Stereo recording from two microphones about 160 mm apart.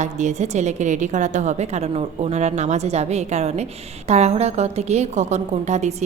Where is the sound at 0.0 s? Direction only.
50° right (ahead or behind).